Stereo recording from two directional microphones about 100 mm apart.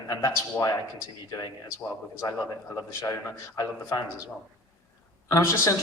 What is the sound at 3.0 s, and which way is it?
A man's voice, 30° left (ahead or behind).